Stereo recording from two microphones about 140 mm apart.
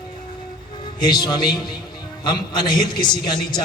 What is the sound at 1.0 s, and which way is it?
A man's voice, 30° left (ahead or behind).